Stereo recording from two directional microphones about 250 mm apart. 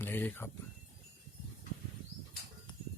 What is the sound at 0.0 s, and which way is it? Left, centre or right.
Speech, centre.